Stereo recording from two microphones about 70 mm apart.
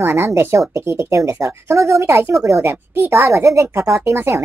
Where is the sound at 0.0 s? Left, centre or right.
Right.